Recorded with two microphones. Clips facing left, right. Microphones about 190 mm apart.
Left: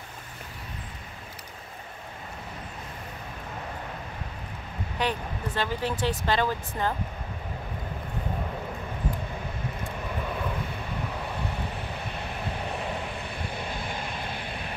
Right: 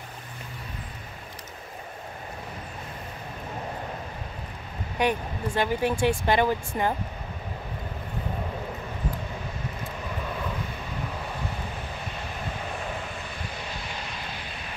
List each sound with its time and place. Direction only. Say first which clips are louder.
4.9 s speech: right 4 dB; 15° right (ahead or behind)
13.6 s vehicle: left 3 dB; 55° left (ahead or behind)